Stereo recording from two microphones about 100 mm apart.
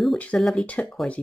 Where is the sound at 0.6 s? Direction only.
15° left (ahead or behind).